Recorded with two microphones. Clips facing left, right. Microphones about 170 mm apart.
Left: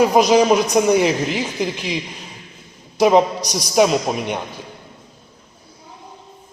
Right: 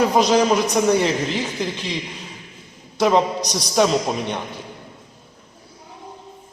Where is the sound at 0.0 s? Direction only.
10° left (ahead or behind).